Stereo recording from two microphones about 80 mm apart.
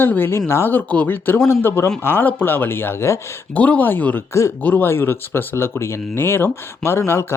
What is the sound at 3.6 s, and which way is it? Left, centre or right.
Speech, centre.